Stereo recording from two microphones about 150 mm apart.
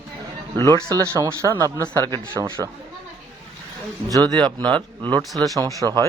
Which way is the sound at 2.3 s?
15° right (ahead or behind).